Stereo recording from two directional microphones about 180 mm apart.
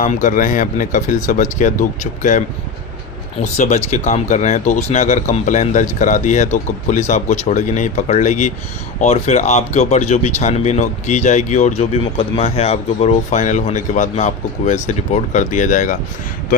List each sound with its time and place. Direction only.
0.0 s speech: 45° left (ahead or behind)
3.4 s speech: 40° left (ahead or behind)